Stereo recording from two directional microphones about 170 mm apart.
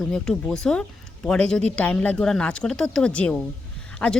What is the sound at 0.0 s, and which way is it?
A woman's voice, 5° left (ahead or behind).